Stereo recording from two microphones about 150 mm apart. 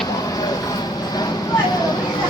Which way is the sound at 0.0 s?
25° left (ahead or behind).